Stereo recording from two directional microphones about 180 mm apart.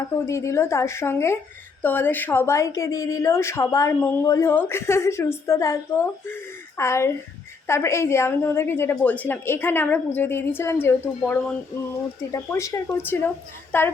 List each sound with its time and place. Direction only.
0.3 s a woman's voice: 15° left (ahead or behind)